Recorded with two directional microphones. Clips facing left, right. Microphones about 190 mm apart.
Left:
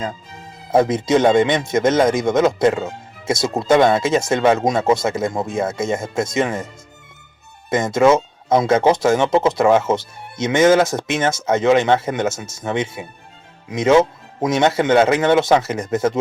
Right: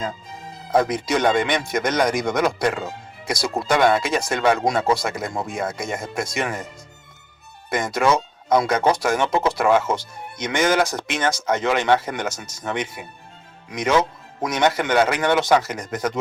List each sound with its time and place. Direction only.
0.7 s speech: 25° left (ahead or behind)
7.7 s speech: 25° left (ahead or behind)